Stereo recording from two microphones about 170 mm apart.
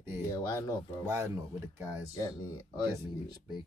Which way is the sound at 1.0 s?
15° right (ahead or behind).